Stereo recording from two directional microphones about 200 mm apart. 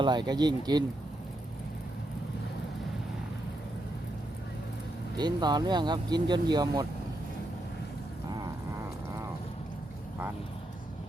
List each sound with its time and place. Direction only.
0.0 s speech: 20° right (ahead or behind)
5.1 s speech: 20° right (ahead or behind)